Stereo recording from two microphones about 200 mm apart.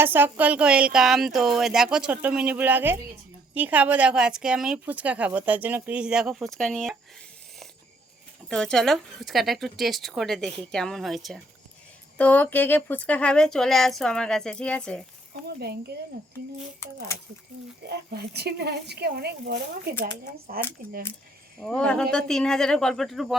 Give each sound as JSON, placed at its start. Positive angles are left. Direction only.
{"t": 0.0, "sound": "a woman's voice", "side_deg": -10}
{"t": 8.4, "sound": "speech", "side_deg": 5}
{"t": 17.8, "sound": "speech", "side_deg": -55}
{"t": 21.6, "sound": "speech", "side_deg": 5}